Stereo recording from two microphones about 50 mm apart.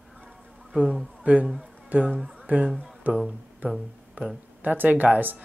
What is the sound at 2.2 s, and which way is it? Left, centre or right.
Music, centre.